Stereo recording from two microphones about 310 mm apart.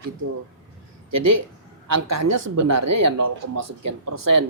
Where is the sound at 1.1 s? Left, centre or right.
Right.